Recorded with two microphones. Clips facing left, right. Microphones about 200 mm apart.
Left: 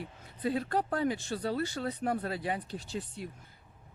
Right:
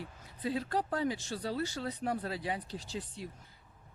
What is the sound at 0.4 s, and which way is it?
Speech, 55° left (ahead or behind).